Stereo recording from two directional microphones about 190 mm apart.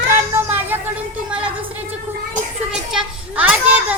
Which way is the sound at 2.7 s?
5° right (ahead or behind).